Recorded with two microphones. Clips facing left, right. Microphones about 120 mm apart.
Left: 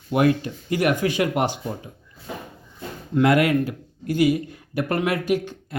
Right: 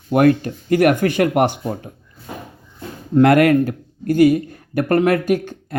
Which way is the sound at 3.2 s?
55° right (ahead or behind).